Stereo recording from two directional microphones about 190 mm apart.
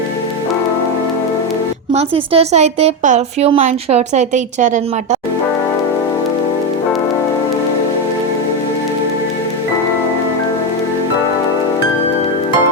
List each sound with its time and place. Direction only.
1.9 s a woman's voice: 30° right (ahead or behind)